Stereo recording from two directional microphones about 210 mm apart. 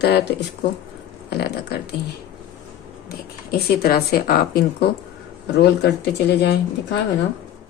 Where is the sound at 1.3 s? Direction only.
50° left (ahead or behind).